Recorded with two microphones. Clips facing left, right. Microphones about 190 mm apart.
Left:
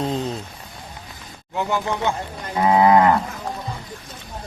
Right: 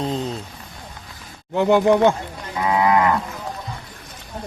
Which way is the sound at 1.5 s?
60° right (ahead or behind).